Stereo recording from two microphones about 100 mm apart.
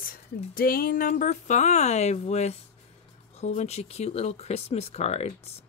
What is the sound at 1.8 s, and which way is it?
Speech, 90° left.